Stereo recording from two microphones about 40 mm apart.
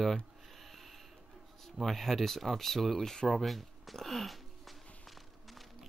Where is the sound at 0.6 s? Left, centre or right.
Centre.